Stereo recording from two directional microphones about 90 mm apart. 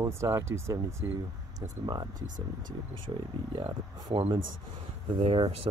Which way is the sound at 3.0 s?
80° right.